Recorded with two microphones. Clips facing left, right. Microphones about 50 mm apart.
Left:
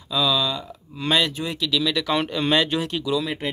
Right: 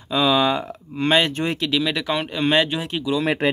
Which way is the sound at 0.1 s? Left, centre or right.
Right.